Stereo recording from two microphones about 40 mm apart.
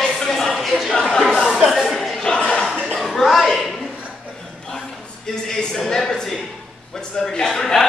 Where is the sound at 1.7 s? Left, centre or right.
Centre.